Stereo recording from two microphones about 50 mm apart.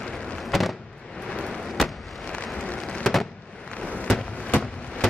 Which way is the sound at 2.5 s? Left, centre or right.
Centre.